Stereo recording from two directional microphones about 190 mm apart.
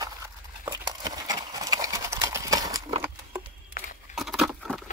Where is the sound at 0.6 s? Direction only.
20° right (ahead or behind).